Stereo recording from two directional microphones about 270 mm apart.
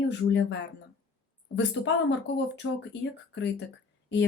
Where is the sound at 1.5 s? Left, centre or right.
Left.